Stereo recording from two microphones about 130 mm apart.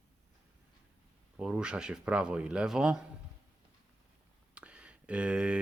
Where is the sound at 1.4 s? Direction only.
5° right (ahead or behind).